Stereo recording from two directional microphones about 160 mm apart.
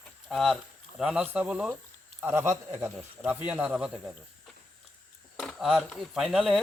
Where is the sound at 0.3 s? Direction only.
Centre (ahead or behind).